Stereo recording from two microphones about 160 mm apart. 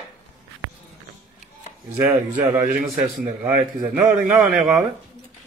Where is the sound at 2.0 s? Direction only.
10° right (ahead or behind).